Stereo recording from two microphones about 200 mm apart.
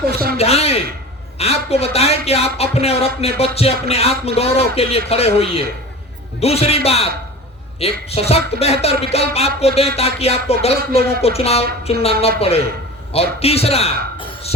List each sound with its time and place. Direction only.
0.3 s a man's voice: 30° left (ahead or behind)